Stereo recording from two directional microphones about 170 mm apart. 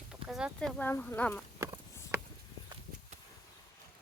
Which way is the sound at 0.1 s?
5° right (ahead or behind).